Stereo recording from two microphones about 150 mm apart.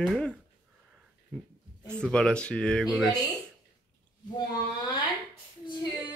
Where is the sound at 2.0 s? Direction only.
5° left (ahead or behind).